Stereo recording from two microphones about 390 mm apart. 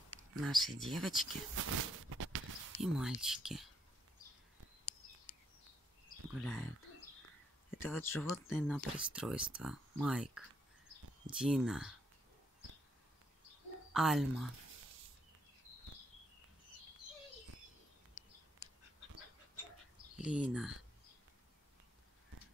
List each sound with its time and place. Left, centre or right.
0.4 s speech: centre
1.5 s a sound: right
2.8 s speech: centre
6.4 s speech: centre
7.7 s speech: centre
13.9 s speech: centre
20.2 s speech: centre